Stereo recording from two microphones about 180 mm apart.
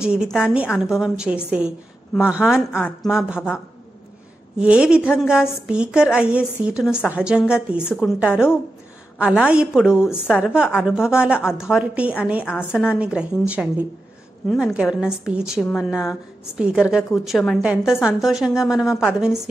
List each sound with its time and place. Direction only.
0.0 s a woman's voice: 5° right (ahead or behind)
4.6 s a woman's voice: 5° right (ahead or behind)